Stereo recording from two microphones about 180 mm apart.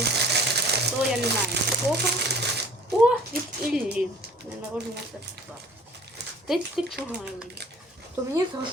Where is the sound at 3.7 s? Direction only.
5° right (ahead or behind).